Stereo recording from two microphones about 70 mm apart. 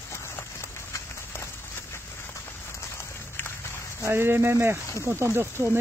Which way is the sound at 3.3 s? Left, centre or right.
Left.